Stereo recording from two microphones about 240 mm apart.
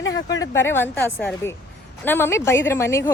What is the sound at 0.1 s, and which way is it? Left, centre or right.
A woman's voice, centre.